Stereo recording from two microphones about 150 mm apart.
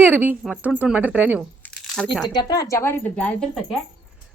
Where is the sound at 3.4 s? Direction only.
5° left (ahead or behind).